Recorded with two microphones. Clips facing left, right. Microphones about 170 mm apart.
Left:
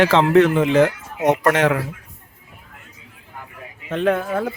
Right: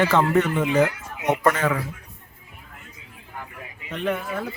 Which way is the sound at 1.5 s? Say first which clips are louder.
Left 6 dB; 75° left (ahead or behind).